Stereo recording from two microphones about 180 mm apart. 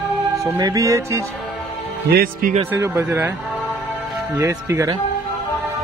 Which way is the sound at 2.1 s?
55° right (ahead or behind).